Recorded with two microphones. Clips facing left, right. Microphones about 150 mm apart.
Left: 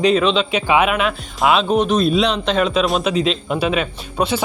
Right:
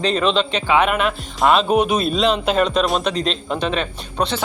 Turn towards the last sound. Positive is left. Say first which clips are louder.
# left 2 dB
turn(degrees=10)  # may be behind; listen again after turning